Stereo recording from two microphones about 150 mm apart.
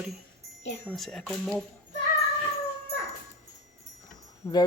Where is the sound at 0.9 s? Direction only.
5° left (ahead or behind).